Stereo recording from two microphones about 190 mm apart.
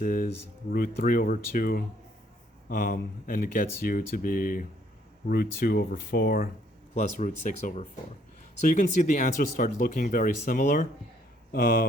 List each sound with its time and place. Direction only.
0.0 s speech: 45° left (ahead or behind)
6.9 s speech: 40° left (ahead or behind)